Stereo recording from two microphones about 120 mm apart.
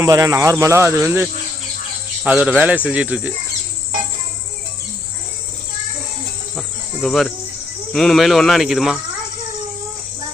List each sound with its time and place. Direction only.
0.0 s speech: 30° right (ahead or behind); by 3.3 s 10° right (ahead or behind)
6.6 s cricket: centre (ahead or behind)
7.9 s speech: centre (ahead or behind)